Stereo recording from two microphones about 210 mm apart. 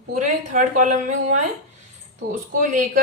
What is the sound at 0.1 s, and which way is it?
Speech, 35° right (ahead or behind).